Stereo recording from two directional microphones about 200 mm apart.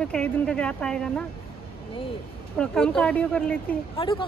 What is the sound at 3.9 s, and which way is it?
Speech, 25° left (ahead or behind).